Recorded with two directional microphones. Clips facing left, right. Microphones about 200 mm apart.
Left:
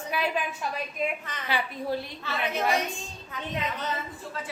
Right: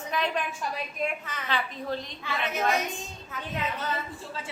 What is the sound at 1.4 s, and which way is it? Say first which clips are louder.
Speech: left 2 dB; 10° left (ahead or behind).